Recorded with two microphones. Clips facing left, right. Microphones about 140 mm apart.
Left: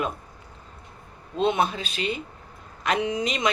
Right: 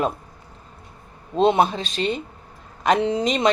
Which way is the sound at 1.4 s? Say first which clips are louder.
Right 5 dB; 35° right (ahead or behind).